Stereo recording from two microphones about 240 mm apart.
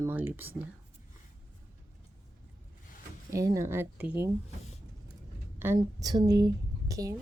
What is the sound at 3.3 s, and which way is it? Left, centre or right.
Speech, centre.